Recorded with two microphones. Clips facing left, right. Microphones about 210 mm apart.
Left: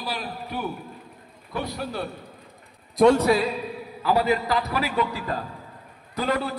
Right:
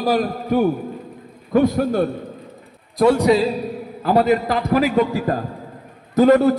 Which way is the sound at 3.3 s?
25° right (ahead or behind).